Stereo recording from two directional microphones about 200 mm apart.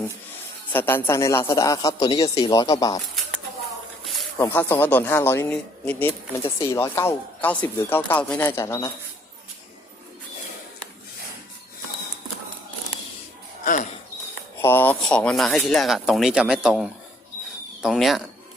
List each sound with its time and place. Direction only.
0.7 s speech: 10° left (ahead or behind)
4.0 s a sound: centre (ahead or behind)
4.4 s speech: 10° left (ahead or behind)
14.6 s speech: 10° left (ahead or behind)